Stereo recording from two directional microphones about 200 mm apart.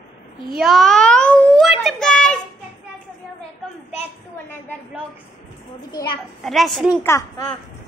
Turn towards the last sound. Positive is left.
turn(degrees=0)  # may be behind; listen again after turning